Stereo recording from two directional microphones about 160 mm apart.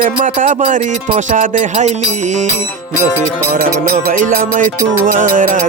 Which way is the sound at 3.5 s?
65° right (ahead or behind).